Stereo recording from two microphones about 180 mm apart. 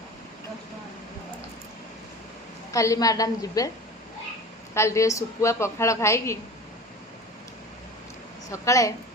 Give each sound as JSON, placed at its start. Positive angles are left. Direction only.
{"t": 2.7, "sound": "a woman's voice", "side_deg": 20}
{"t": 4.7, "sound": "a woman's voice", "side_deg": 15}
{"t": 8.4, "sound": "a woman's voice", "side_deg": 15}